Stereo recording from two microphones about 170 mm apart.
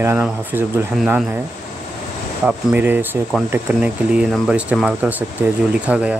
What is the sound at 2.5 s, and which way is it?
Speech, 10° right (ahead or behind).